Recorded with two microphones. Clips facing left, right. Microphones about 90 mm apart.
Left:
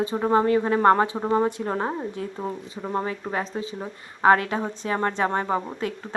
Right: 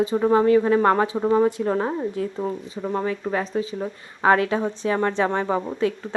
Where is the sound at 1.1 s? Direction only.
20° left (ahead or behind).